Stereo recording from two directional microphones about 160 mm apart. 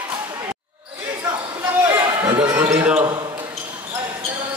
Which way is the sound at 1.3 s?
30° right (ahead or behind).